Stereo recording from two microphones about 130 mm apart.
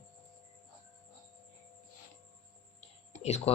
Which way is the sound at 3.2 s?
55° left (ahead or behind).